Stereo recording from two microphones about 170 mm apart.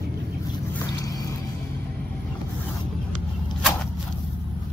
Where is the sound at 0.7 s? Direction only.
20° left (ahead or behind).